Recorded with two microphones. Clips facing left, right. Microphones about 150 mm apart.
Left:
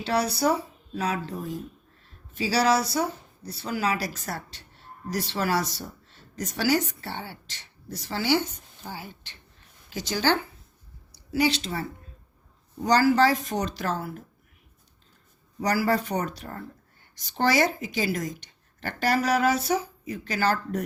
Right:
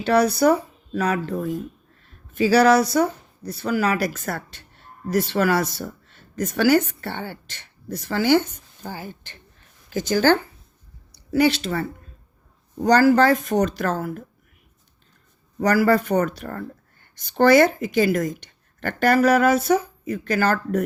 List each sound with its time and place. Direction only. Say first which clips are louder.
0.0 s speech: right 7 dB; 55° right (ahead or behind)
11.1 s speech: right 6 dB; 60° right (ahead or behind)
15.5 s speech: right 6 dB; 55° right (ahead or behind)